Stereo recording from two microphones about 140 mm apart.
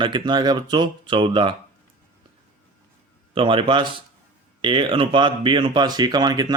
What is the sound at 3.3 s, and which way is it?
Speech, 40° right (ahead or behind).